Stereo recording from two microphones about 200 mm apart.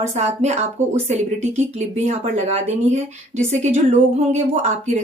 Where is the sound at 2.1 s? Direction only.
35° right (ahead or behind).